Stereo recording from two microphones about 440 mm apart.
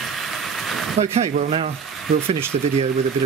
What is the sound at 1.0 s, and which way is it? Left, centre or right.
Speech, centre.